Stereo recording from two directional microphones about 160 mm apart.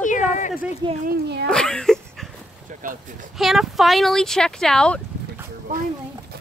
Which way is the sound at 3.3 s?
Centre (ahead or behind).